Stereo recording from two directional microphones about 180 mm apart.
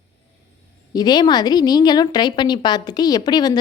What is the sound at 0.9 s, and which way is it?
A woman's voice, 20° left (ahead or behind).